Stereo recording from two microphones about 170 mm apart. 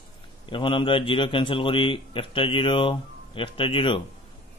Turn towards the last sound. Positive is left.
turn(degrees=30)  # may be behind; listen again after turning